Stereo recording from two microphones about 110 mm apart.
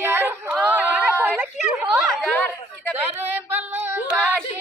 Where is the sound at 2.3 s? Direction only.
15° left (ahead or behind).